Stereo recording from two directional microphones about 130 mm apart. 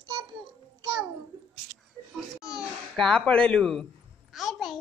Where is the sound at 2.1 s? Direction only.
5° right (ahead or behind).